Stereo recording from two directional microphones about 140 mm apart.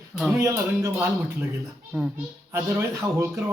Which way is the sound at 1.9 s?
10° right (ahead or behind).